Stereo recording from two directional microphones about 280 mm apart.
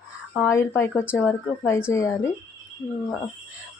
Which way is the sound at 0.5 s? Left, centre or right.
Centre.